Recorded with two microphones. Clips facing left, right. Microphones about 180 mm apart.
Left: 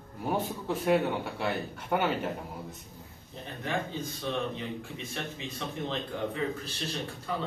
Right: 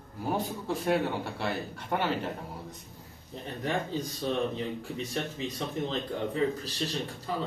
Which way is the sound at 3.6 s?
35° right (ahead or behind).